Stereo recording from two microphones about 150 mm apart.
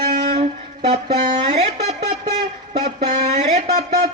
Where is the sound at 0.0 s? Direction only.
50° right (ahead or behind).